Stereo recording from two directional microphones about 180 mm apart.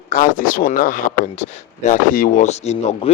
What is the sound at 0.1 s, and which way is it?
Speech, 50° left (ahead or behind).